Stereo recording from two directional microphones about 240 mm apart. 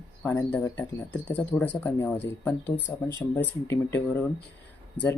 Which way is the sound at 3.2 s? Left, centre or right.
Centre.